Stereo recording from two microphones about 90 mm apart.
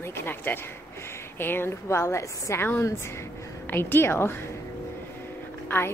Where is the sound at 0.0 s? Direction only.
25° left (ahead or behind).